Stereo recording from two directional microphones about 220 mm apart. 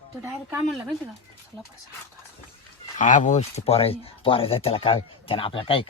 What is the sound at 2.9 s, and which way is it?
Speech, 35° left (ahead or behind).